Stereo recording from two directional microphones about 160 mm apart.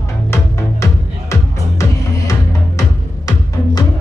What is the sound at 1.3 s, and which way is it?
Music, 20° left (ahead or behind).